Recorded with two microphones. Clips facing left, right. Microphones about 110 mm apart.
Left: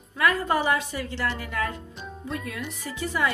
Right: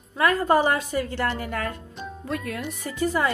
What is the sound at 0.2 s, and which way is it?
A woman's voice, 40° right (ahead or behind).